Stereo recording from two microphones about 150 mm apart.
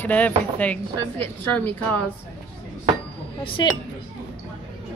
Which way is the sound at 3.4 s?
35° left (ahead or behind).